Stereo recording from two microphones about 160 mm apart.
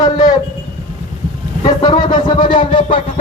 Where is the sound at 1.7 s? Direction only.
25° left (ahead or behind).